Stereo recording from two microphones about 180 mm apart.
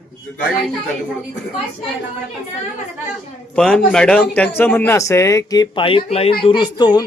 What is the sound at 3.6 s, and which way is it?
A man's voice, 5° left (ahead or behind).